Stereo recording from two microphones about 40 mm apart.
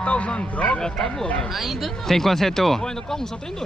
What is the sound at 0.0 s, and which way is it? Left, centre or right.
Speech, left.